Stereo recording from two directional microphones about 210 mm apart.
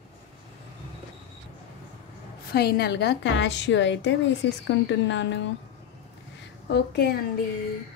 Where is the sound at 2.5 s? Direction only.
50° left (ahead or behind).